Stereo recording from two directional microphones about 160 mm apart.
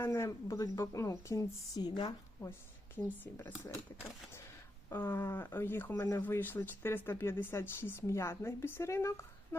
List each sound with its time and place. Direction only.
0.0 s a woman's voice: 15° left (ahead or behind)
4.9 s speech: 15° left (ahead or behind)